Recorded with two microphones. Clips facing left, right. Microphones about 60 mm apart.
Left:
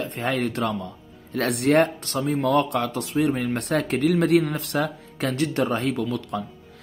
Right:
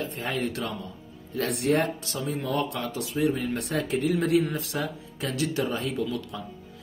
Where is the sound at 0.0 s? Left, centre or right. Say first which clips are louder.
Left 4 dB; left.